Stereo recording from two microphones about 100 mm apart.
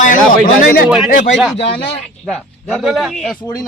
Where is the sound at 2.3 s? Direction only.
Centre (ahead or behind).